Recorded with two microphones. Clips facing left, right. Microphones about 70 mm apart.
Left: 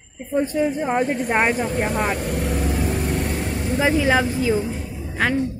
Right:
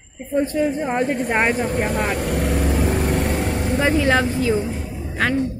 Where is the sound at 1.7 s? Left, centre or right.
Right.